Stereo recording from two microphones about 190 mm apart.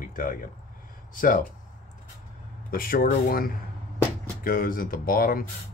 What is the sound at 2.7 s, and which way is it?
Speech, 50° left (ahead or behind).